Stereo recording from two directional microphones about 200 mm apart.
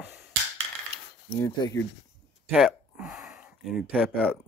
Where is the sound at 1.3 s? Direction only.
15° left (ahead or behind).